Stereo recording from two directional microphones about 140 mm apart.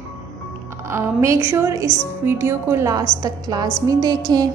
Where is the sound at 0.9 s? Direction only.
20° right (ahead or behind).